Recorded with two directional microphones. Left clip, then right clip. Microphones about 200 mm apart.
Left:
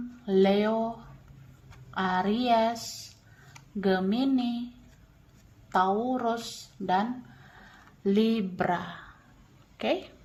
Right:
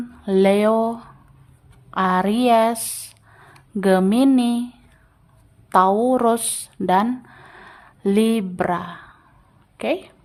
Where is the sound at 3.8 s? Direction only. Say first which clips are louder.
Right 10 dB; 40° right (ahead or behind).